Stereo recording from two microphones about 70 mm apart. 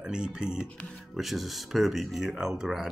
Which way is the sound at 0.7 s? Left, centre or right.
Centre.